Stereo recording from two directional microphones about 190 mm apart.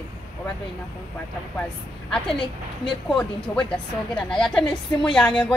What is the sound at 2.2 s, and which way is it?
Music, 25° left (ahead or behind).